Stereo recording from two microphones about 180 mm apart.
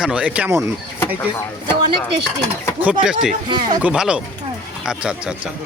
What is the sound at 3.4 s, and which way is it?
Speech, 25° right (ahead or behind).